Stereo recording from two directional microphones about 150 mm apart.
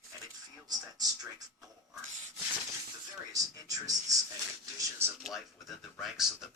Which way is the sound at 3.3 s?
25° right (ahead or behind).